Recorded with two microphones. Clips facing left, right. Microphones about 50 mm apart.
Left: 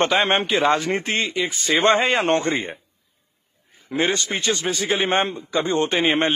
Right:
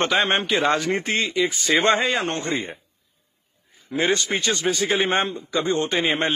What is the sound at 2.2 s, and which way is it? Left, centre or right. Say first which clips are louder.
Speech: left 5 dB; left.